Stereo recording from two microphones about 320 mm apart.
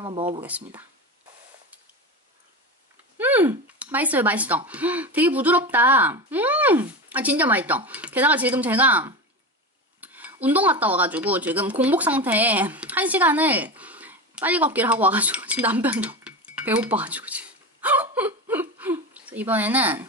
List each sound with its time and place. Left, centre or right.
0.0 s speech: centre
0.4 s speech: centre
3.2 s speech: centre